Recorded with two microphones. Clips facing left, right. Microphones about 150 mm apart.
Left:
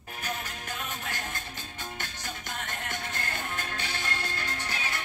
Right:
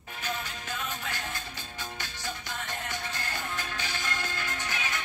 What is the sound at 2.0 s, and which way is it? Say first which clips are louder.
Music: right 1 dB; 50° left (ahead or behind).